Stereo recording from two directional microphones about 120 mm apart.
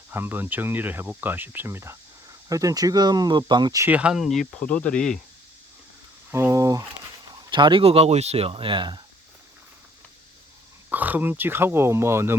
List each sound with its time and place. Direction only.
0.1 s speech: 20° right (ahead or behind); by 3.8 s 35° right (ahead or behind)
3.8 s speech: 10° right (ahead or behind); by 5.2 s 5° left (ahead or behind)
6.3 s speech: 25° right (ahead or behind)
7.5 s speech: 45° right (ahead or behind)
10.8 s speech: 15° right (ahead or behind)